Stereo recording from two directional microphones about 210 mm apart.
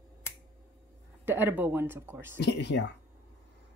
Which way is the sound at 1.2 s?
10° right (ahead or behind).